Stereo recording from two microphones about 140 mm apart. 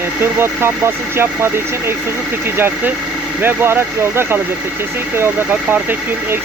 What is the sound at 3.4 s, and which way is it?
Speech, 15° right (ahead or behind).